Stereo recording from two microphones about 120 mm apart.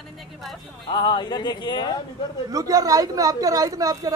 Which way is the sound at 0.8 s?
35° left (ahead or behind).